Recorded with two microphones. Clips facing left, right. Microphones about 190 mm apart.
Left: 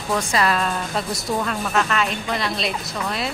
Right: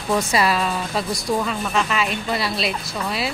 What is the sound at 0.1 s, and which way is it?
Speech, 10° right (ahead or behind).